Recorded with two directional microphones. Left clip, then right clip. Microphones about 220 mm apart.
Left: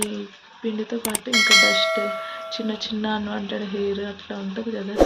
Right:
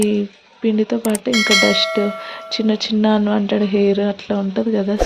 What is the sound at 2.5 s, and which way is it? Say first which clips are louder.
Speech: right 12 dB; 45° right (ahead or behind).